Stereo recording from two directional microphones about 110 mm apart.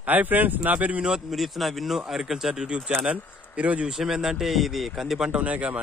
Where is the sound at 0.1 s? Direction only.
15° right (ahead or behind).